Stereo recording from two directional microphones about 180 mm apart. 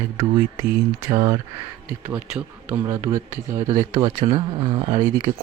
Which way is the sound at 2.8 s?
15° right (ahead or behind).